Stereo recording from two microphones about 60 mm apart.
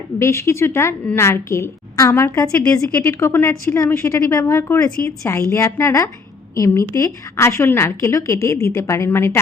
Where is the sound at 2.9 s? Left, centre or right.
Left.